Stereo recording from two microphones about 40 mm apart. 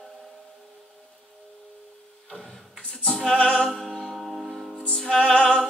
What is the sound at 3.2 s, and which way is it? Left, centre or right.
Music, left.